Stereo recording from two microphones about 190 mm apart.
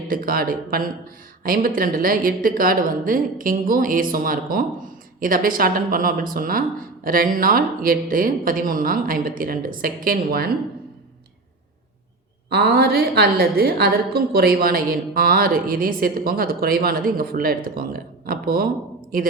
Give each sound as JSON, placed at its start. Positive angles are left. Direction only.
{"t": 0.1, "sound": "a woman's voice", "side_deg": -50}
{"t": 12.5, "sound": "a woman's voice", "side_deg": -55}